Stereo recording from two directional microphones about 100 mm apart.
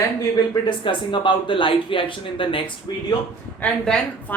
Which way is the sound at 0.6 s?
55° left (ahead or behind).